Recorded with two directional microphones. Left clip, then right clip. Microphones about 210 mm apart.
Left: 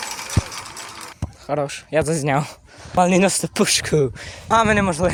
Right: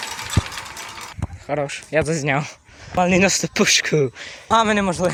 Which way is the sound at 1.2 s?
10° left (ahead or behind).